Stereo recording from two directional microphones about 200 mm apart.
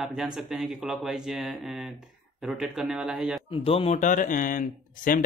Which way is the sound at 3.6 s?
30° left (ahead or behind).